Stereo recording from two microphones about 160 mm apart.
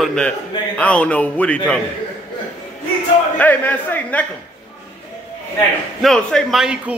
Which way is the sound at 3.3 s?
10° left (ahead or behind).